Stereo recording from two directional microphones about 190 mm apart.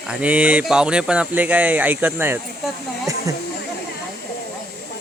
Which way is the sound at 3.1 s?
15° right (ahead or behind).